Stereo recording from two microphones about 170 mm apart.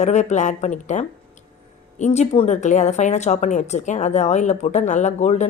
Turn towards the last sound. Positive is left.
turn(degrees=40)  # may be behind; listen again after turning